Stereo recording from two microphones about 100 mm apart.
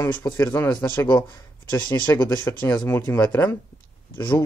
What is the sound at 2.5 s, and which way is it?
Speech, 25° left (ahead or behind).